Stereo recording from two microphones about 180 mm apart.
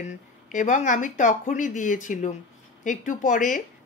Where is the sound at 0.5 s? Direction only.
45° left (ahead or behind).